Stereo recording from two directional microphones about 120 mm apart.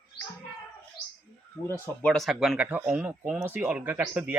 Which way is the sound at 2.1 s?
Centre (ahead or behind).